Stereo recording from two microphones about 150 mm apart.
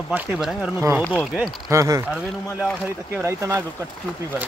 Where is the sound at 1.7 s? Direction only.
20° right (ahead or behind).